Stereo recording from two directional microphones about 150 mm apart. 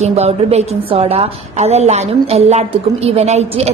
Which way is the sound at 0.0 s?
45° right (ahead or behind).